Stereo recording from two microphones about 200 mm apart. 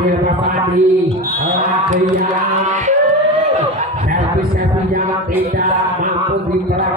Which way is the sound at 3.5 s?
35° right (ahead or behind).